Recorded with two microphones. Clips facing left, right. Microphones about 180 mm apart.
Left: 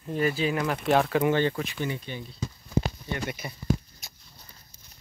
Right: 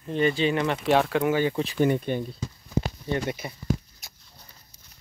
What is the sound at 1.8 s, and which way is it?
Speech, 50° right (ahead or behind).